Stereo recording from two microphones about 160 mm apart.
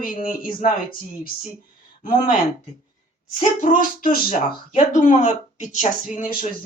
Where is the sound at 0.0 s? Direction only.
60° left (ahead or behind).